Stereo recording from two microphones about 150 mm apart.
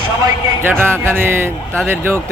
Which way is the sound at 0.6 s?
15° right (ahead or behind).